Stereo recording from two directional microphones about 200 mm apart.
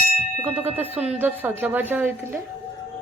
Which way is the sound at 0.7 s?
10° right (ahead or behind).